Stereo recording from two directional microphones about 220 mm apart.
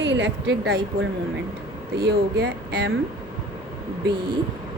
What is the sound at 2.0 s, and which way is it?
Speech, 50° right (ahead or behind).